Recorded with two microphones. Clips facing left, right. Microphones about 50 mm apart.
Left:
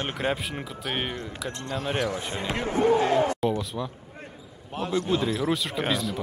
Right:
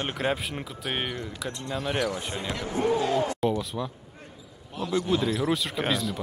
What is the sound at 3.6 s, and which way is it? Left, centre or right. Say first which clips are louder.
Speech: even; centre.